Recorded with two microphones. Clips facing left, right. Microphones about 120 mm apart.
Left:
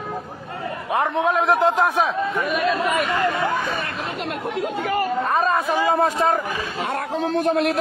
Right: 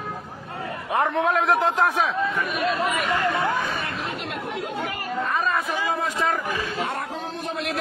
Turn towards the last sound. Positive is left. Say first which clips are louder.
# left 6 dB
turn(degrees=85)